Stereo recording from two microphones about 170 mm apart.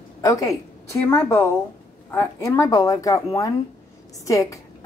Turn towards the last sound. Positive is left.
turn(degrees=20)  # may be behind; listen again after turning